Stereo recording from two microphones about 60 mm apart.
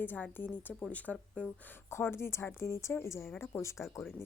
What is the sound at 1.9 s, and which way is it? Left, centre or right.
A woman's voice, left.